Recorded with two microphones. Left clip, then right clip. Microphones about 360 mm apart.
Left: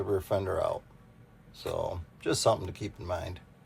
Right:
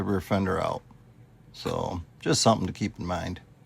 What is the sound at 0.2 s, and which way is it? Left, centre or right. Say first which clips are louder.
Speech: right 2 dB; right.